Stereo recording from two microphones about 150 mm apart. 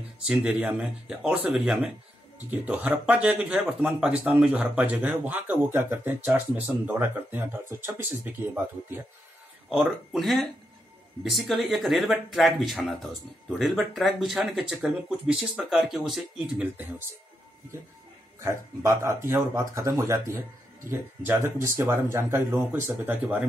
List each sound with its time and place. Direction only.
0.3 s speech: 10° right (ahead or behind)
9.7 s speech: centre (ahead or behind)
18.4 s speech: 20° right (ahead or behind)